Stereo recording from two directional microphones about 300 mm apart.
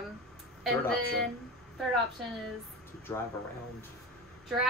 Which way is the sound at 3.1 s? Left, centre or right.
Centre.